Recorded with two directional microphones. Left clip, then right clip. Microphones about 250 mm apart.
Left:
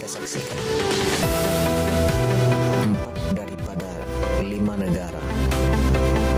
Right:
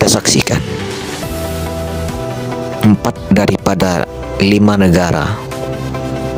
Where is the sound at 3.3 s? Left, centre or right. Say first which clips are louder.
Right 18 dB; right.